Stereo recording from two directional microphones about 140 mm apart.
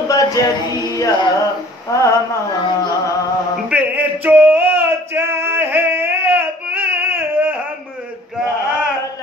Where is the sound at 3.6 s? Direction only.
10° right (ahead or behind).